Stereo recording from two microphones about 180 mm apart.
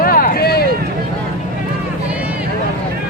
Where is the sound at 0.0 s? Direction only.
55° left (ahead or behind).